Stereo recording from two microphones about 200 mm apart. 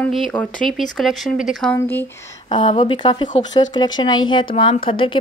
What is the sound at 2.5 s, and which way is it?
Speech, 25° left (ahead or behind).